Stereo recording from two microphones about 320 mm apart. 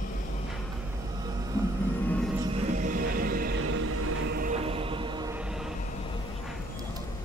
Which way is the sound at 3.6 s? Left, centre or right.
Right.